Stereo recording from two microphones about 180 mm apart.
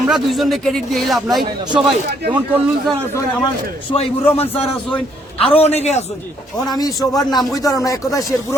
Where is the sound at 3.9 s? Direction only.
35° left (ahead or behind).